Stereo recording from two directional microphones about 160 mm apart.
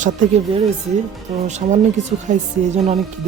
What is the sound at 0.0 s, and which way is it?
Speech, 40° right (ahead or behind).